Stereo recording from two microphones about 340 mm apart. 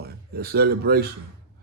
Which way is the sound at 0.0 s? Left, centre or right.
Right.